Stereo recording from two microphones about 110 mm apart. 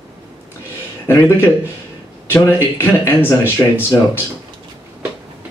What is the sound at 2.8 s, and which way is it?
Speech, 20° left (ahead or behind).